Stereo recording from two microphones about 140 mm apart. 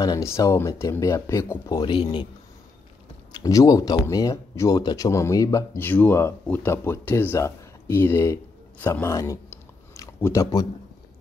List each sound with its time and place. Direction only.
0.0 s speech: 25° left (ahead or behind)
1.8 s speech: 35° left (ahead or behind)
3.3 s speech: 25° left (ahead or behind)